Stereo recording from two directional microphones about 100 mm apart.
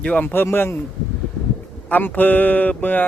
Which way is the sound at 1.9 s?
20° left (ahead or behind).